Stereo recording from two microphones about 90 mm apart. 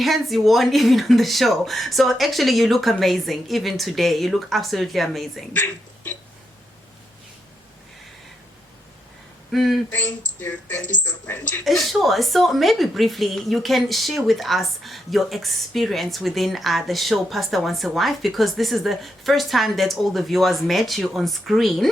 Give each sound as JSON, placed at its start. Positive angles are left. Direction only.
{"t": 0.0, "sound": "a woman's voice", "side_deg": 0}
{"t": 5.5, "sound": "speech", "side_deg": 20}
{"t": 9.5, "sound": "a woman's voice", "side_deg": 0}
{"t": 9.9, "sound": "speech", "side_deg": 20}
{"t": 11.6, "sound": "a woman's voice", "side_deg": 0}